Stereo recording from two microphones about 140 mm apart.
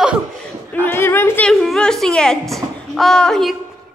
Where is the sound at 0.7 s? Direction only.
15° left (ahead or behind).